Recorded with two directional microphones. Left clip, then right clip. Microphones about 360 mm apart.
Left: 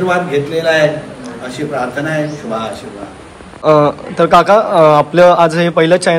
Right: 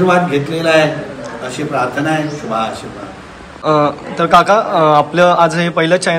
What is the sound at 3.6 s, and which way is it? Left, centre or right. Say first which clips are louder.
A man's voice: left 3 dB; centre.